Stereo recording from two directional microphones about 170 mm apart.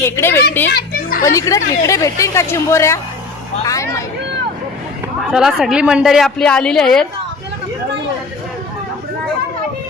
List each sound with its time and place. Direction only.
0.0 s a woman's voice: 15° left (ahead or behind)
0.7 s children playing: 65° left (ahead or behind)
1.2 s a woman's voice: 20° left (ahead or behind)
5.3 s a woman's voice: 5° right (ahead or behind)